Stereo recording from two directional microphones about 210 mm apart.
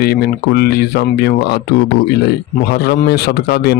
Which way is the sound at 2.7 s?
50° left (ahead or behind).